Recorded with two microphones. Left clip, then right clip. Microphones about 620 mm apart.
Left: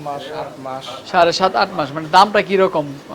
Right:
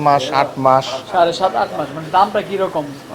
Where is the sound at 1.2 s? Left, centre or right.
Left.